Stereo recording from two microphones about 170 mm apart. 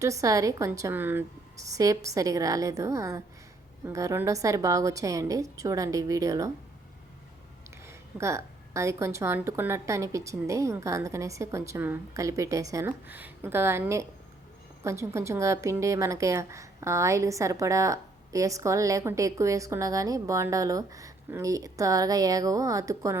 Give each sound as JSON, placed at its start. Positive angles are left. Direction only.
{"t": 0.0, "sound": "a woman's voice", "side_deg": -20}
{"t": 7.9, "sound": "a woman's voice", "side_deg": -15}